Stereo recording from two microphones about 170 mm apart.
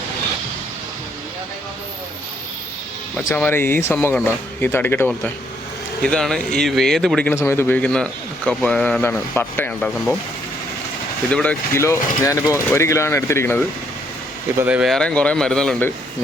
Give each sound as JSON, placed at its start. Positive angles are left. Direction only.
{"t": 3.2, "sound": "a man's voice", "side_deg": 10}
{"t": 7.3, "sound": "a man's voice", "side_deg": 15}
{"t": 11.3, "sound": "a man's voice", "side_deg": 5}
{"t": 14.6, "sound": "speech", "side_deg": -5}